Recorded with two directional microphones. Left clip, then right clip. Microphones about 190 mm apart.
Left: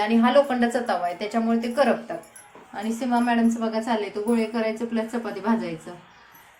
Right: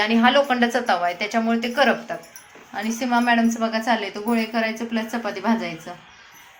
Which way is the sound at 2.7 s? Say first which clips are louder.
Right 3 dB; 25° right (ahead or behind).